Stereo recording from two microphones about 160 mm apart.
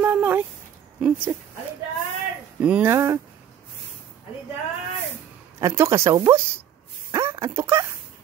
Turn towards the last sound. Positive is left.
turn(degrees=-15)  # may be behind; listen again after turning